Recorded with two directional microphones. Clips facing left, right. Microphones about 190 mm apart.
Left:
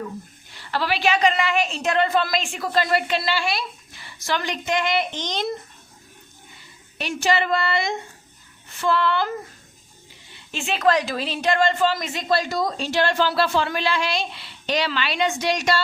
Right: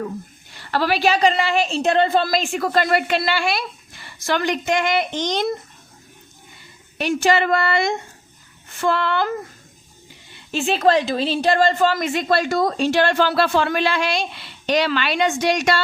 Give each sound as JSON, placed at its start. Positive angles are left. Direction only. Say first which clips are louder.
{"t": 0.7, "sound": "a woman's voice", "louder": "right 3 dB", "side_deg": -45}
{"t": 7.0, "sound": "a woman's voice", "louder": "right 4 dB", "side_deg": -50}
{"t": 10.5, "sound": "a woman's voice", "louder": "right 3 dB", "side_deg": -35}
{"t": 11.9, "sound": "speech", "louder": "right 4 dB", "side_deg": -55}